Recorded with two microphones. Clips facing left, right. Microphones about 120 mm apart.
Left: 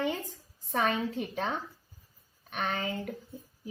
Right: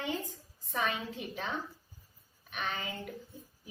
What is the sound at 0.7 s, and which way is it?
Speech, 45° left (ahead or behind).